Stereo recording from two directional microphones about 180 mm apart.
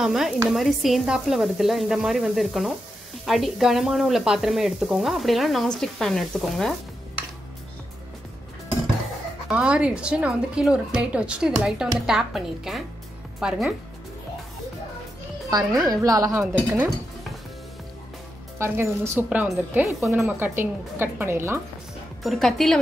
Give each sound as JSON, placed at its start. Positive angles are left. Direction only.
{"t": 0.0, "sound": "sizzle", "side_deg": -5}
{"t": 9.5, "sound": "sizzle", "side_deg": -5}
{"t": 15.7, "sound": "sizzle", "side_deg": 0}
{"t": 16.0, "sound": "a woman's voice", "side_deg": -20}
{"t": 18.6, "sound": "a woman's voice", "side_deg": -10}
{"t": 22.2, "sound": "sizzle", "side_deg": 0}